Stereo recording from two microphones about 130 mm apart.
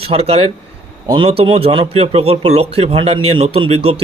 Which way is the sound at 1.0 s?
30° right (ahead or behind).